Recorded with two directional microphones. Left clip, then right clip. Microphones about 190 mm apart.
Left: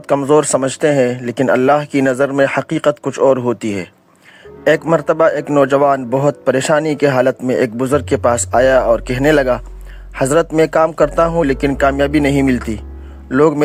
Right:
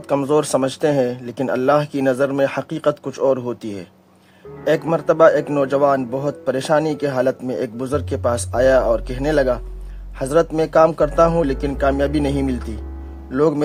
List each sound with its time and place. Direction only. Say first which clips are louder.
0.1 s a man's voice: left 5 dB; 20° left (ahead or behind)